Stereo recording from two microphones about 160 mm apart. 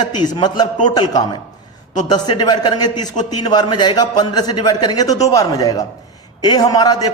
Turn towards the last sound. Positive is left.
turn(degrees=25)  # may be behind; listen again after turning